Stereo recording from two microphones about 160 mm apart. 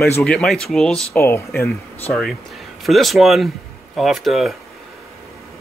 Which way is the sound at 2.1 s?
Centre (ahead or behind).